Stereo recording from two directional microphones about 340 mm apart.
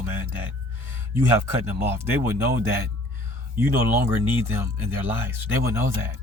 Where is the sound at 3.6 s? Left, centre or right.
Centre.